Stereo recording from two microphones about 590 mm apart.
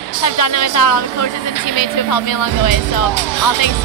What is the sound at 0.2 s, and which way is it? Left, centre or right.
Speech, left.